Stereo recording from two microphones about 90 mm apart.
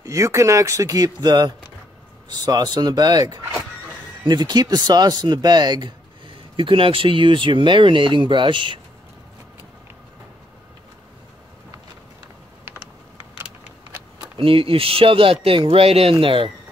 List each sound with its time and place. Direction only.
0.0 s speech: 35° right (ahead or behind); by 8.7 s 65° right (ahead or behind)
14.4 s speech: 85° right